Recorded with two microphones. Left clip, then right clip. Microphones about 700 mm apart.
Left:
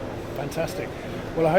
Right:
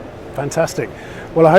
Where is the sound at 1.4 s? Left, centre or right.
Right.